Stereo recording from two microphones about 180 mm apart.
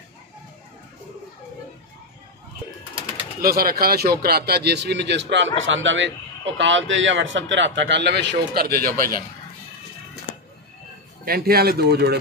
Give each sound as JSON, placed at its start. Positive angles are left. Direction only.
{"t": 3.3, "sound": "speech", "side_deg": -55}
{"t": 5.6, "sound": "a man's voice", "side_deg": -90}
{"t": 11.2, "sound": "speech", "side_deg": -55}